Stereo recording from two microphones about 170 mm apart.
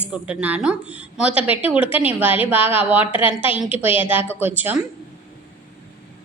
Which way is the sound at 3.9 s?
35° left (ahead or behind).